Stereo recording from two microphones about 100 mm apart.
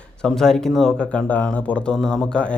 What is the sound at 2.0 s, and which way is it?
Speech, centre (ahead or behind).